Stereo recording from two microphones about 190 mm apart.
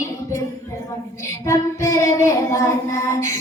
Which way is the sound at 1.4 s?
15° left (ahead or behind).